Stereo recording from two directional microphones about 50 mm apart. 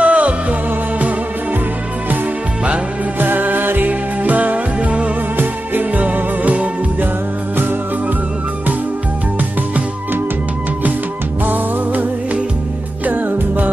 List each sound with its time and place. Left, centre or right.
0.0 s music: right
3.2 s music: right
11.4 s music: right